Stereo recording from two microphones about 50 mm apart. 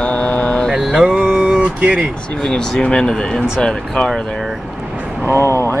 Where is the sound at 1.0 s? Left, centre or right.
Centre.